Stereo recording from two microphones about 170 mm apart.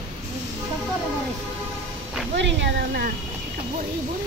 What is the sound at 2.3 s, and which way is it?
Speech, 90° right.